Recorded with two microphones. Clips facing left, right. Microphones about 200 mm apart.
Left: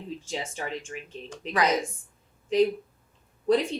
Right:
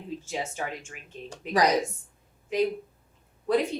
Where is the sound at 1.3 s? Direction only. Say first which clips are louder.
Right 2 dB; 35° right (ahead or behind).